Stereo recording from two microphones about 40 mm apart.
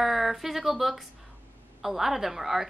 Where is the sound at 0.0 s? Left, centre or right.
Centre.